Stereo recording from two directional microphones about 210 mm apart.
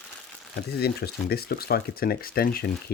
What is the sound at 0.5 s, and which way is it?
Speech, 50° left (ahead or behind).